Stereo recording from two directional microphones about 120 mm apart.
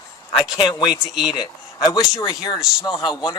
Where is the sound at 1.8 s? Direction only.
35° left (ahead or behind).